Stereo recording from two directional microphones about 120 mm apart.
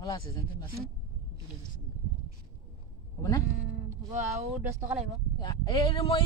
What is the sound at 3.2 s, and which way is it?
Speech, 30° left (ahead or behind).